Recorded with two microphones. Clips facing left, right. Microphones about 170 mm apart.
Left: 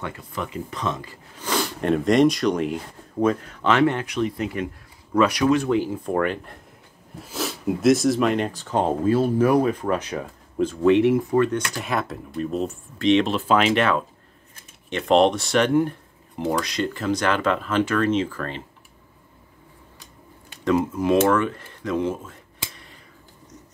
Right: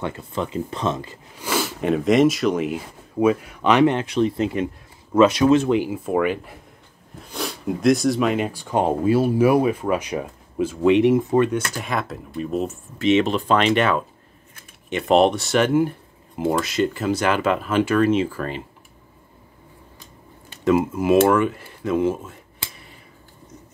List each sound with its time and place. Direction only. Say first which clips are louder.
0.0 s speech: right 4 dB; 25° right (ahead or behind)
1.4 s speech: right 1 dB; 5° right (ahead or behind)
11.5 s speech: right 1 dB; centre (ahead or behind)
20.6 s speech: right 2 dB; 5° right (ahead or behind)